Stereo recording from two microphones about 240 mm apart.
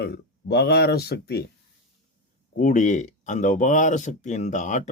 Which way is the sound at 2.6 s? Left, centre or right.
Left.